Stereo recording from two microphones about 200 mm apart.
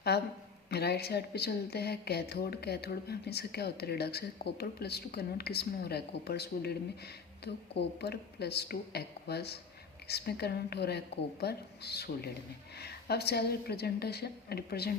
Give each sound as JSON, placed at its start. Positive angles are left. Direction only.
{"t": 0.1, "sound": "a woman's voice", "side_deg": 55}